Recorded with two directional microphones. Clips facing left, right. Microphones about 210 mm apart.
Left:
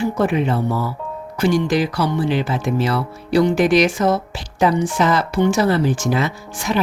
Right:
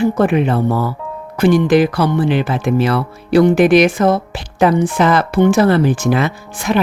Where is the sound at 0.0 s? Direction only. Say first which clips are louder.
Right 5 dB; 55° right (ahead or behind).